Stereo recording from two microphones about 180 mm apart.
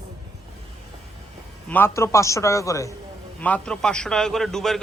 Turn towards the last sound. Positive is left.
turn(degrees=0)  # may be behind; listen again after turning